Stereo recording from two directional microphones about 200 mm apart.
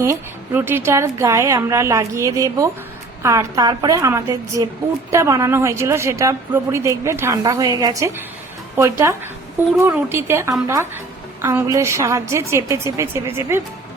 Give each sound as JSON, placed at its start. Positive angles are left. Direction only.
{"t": 0.0, "sound": "a woman's voice", "side_deg": -10}